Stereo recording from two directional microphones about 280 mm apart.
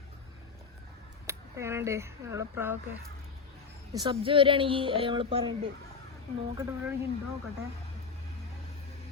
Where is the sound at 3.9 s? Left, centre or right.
Centre.